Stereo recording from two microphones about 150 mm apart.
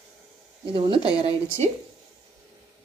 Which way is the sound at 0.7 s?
35° right (ahead or behind).